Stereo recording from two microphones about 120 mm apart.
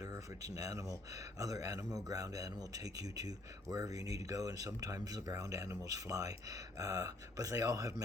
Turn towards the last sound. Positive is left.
turn(degrees=-30)  # may be behind; listen again after turning